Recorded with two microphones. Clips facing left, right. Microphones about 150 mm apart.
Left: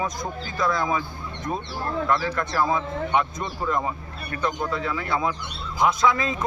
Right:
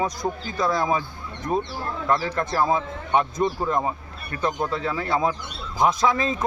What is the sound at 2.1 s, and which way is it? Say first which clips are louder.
Speech: right 4 dB; 30° right (ahead or behind).